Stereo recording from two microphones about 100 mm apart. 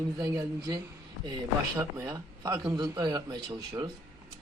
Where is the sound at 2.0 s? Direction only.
35° right (ahead or behind).